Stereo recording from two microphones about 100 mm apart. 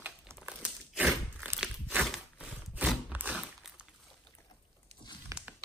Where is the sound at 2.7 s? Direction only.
15° right (ahead or behind).